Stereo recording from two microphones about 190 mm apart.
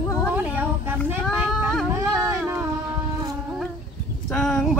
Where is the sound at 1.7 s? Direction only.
Centre (ahead or behind).